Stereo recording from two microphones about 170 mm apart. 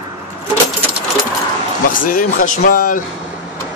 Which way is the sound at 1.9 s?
55° left (ahead or behind).